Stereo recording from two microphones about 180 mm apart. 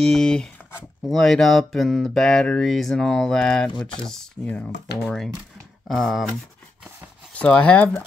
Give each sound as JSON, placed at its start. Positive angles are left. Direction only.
{"t": 0.0, "sound": "speech", "side_deg": 5}
{"t": 7.3, "sound": "speech", "side_deg": 5}